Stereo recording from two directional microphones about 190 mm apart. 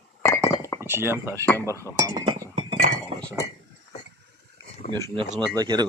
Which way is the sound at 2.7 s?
45° right (ahead or behind).